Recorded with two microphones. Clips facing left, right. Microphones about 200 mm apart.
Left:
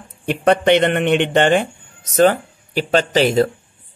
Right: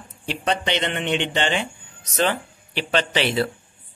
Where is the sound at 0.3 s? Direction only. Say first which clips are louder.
Left 10 dB; 55° left (ahead or behind).